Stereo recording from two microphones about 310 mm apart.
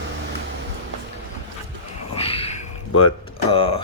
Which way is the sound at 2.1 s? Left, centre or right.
Centre.